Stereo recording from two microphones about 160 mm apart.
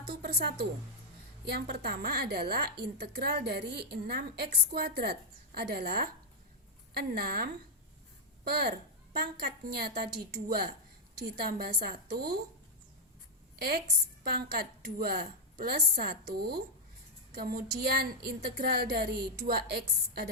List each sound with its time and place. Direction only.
0.2 s a woman's voice: 85° right
13.6 s a woman's voice: 75° right (ahead or behind)